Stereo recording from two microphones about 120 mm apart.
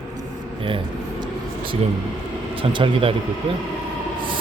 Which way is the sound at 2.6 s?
45° right (ahead or behind).